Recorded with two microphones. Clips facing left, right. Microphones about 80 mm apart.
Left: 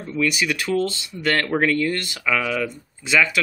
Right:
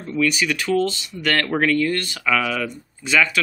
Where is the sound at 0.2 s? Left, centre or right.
Left.